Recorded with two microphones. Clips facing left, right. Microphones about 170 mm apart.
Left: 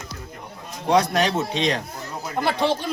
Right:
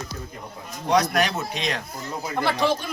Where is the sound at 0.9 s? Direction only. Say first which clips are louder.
Left 2 dB; 30° left (ahead or behind).